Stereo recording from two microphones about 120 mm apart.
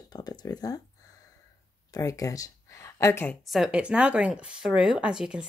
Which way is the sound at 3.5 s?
5° right (ahead or behind).